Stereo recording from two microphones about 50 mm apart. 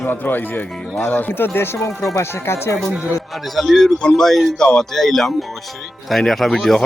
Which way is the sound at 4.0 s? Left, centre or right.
Centre.